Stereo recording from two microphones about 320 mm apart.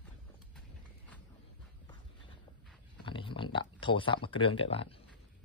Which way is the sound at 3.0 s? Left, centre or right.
Centre.